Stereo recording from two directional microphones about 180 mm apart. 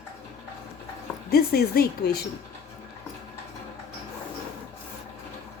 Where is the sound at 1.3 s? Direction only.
60° left (ahead or behind).